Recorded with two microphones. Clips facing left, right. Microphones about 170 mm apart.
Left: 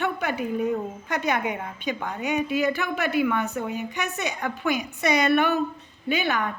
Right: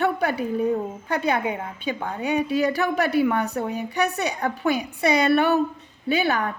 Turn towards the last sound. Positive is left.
turn(degrees=-35)  # may be behind; listen again after turning